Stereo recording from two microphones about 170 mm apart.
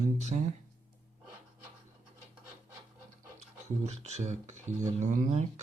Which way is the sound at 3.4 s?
40° right (ahead or behind).